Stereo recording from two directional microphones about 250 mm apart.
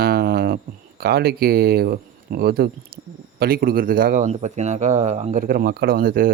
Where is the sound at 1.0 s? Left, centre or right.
Right.